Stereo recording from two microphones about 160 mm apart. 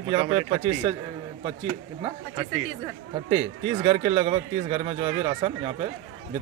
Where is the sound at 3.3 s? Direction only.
30° right (ahead or behind).